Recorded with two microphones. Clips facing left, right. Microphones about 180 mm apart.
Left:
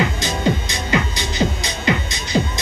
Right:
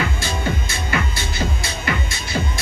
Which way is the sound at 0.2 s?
15° left (ahead or behind).